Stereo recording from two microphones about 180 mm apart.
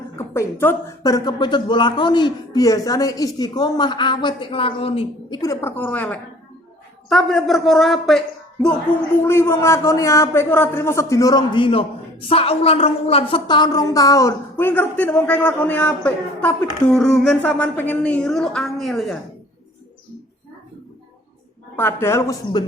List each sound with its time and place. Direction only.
0.2 s a woman's voice: 15° left (ahead or behind); by 5.4 s 30° left (ahead or behind)
5.4 s a woman's voice: 15° left (ahead or behind)
9.2 s a woman's voice: 15° left (ahead or behind)
21.8 s a woman's voice: 15° left (ahead or behind)